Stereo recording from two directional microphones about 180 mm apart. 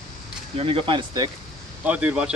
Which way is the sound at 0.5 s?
30° right (ahead or behind).